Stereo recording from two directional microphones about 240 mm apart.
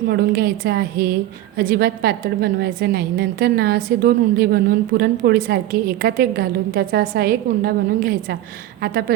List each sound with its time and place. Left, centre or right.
0.1 s a woman's voice: right